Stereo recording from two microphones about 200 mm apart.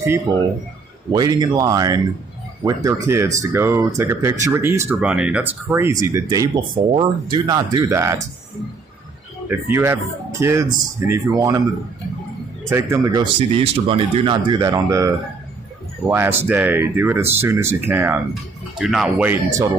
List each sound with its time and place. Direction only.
1.1 s speech: 20° right (ahead or behind)
9.5 s speech: 10° right (ahead or behind)
12.6 s speech: 15° right (ahead or behind)